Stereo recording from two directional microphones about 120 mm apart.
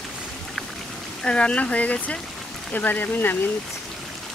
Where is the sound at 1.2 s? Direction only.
10° left (ahead or behind).